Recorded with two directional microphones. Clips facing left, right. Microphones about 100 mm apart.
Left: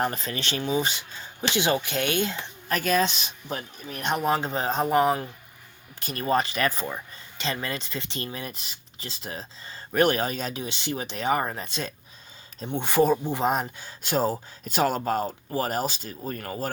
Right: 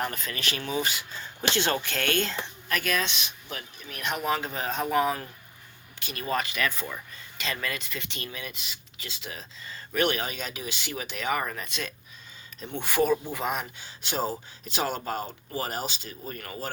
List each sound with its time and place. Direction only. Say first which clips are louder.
0.0 s speech: left 4 dB; 30° left (ahead or behind)
1.4 s speech: left 2 dB; 15° left (ahead or behind)
2.6 s speech: left 6 dB; 35° left (ahead or behind)
6.0 s speech: left 5 dB; 40° left (ahead or behind)